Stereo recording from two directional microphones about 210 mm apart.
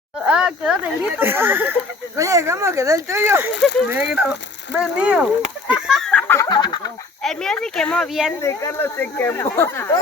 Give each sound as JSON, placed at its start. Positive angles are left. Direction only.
{"t": 0.3, "sound": "speech", "side_deg": -5}
{"t": 3.5, "sound": "speech", "side_deg": 55}
{"t": 3.9, "sound": "speech", "side_deg": -5}
{"t": 5.7, "sound": "chicken", "side_deg": 0}
{"t": 6.5, "sound": "a sound", "side_deg": 20}
{"t": 7.2, "sound": "speech", "side_deg": 0}
{"t": 8.4, "sound": "speech", "side_deg": 15}